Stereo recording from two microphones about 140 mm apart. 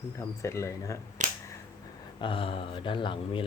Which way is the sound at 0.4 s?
20° left (ahead or behind).